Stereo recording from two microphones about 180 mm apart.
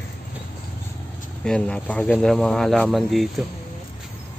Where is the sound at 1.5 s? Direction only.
5° left (ahead or behind).